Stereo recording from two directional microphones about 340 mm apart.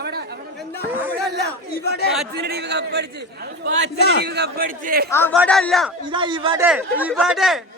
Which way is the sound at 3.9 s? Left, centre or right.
Left.